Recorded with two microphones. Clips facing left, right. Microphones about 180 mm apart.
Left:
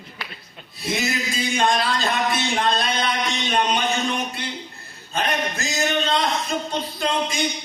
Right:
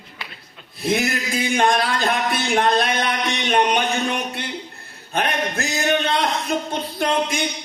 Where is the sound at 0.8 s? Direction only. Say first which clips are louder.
Right 5 dB; 60° right (ahead or behind).